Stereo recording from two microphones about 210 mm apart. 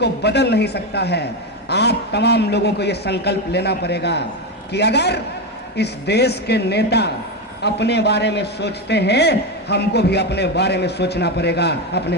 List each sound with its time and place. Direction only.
0.0 s a man's voice: 55° left (ahead or behind)